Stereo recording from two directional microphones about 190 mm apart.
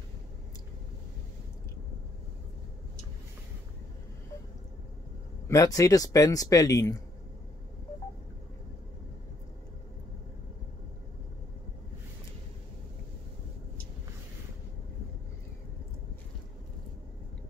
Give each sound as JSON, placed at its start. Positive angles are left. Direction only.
{"t": 5.5, "sound": "speech", "side_deg": 15}